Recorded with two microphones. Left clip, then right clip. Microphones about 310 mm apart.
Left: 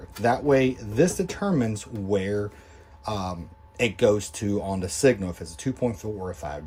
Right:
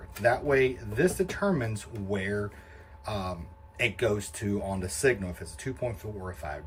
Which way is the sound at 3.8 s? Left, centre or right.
Centre.